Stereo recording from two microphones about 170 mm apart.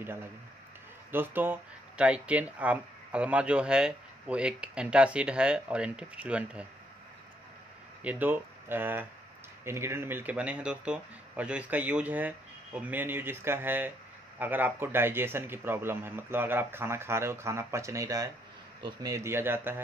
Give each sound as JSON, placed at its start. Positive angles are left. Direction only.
{"t": 0.0, "sound": "speech", "side_deg": -15}
{"t": 8.0, "sound": "speech", "side_deg": -10}